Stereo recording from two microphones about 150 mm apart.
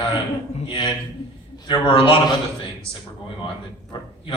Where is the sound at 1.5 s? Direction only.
30° left (ahead or behind).